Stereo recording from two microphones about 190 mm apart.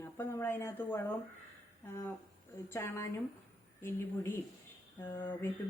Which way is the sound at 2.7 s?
15° left (ahead or behind).